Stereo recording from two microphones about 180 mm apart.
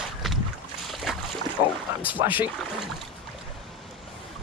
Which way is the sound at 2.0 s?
10° right (ahead or behind).